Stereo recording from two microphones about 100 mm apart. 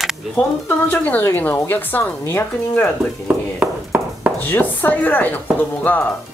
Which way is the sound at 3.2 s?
15° right (ahead or behind).